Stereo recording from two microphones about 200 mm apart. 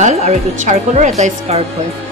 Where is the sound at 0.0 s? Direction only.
35° right (ahead or behind).